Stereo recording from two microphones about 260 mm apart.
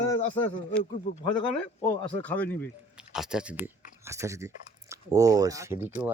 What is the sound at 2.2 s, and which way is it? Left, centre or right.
Speech, centre.